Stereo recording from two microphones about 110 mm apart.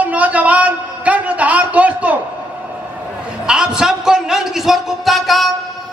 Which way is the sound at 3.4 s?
5° right (ahead or behind).